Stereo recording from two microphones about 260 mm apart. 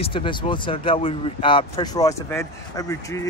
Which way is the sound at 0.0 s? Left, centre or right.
Centre.